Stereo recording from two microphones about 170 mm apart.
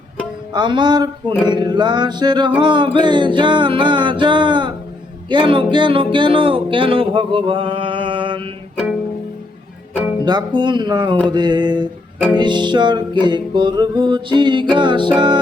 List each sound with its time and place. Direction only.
0.5 s music: 25° right (ahead or behind)
9.9 s music: 10° right (ahead or behind)
10.2 s music: 25° right (ahead or behind)